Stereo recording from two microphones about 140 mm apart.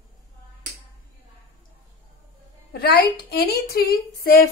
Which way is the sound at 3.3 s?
90° left.